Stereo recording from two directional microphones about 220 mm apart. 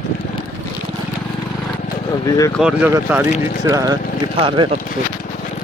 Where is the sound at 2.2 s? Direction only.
15° left (ahead or behind).